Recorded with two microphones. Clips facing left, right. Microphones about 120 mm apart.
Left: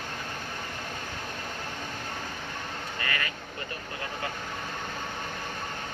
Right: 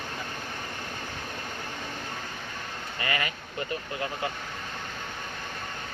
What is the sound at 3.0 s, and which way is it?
Vehicle, 15° right (ahead or behind).